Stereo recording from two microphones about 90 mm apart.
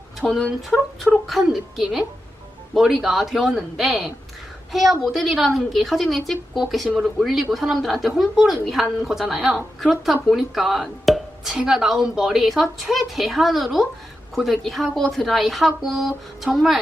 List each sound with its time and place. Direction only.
0.2 s speech: 10° left (ahead or behind)
0.7 s speech: centre (ahead or behind)